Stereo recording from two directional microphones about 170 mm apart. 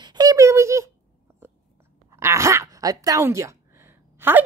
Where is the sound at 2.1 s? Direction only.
15° right (ahead or behind).